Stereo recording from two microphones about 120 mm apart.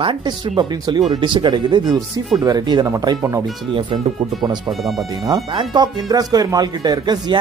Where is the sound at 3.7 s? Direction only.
45° right (ahead or behind).